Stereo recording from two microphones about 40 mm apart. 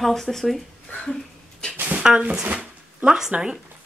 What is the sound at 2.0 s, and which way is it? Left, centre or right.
Speech, right.